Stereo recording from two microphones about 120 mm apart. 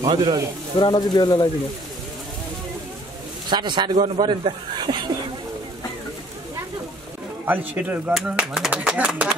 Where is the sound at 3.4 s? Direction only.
40° right (ahead or behind).